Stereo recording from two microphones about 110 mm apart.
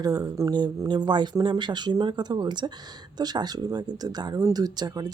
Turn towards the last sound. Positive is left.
turn(degrees=-35)  # may be behind; listen again after turning